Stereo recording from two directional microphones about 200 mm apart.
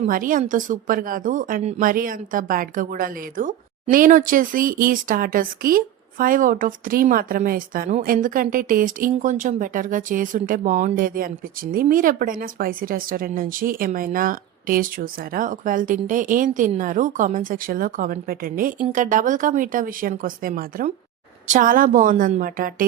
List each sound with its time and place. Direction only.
0.0 s speech: 45° right (ahead or behind)